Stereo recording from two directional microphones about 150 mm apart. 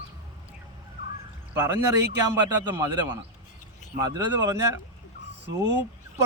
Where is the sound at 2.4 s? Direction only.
25° right (ahead or behind).